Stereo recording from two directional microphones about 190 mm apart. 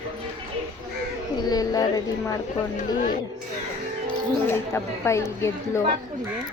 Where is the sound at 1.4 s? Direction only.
20° left (ahead or behind).